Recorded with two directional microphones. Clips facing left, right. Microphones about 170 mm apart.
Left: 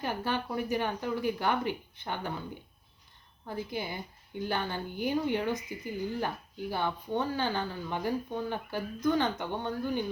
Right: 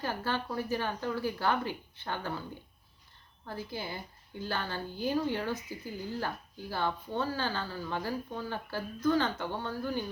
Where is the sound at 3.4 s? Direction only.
15° left (ahead or behind).